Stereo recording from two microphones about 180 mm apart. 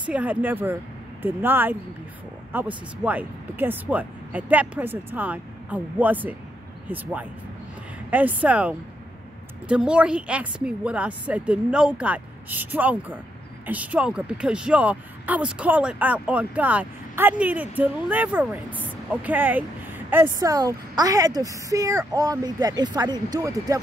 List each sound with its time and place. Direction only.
0.0 s a woman's voice: 10° right (ahead or behind)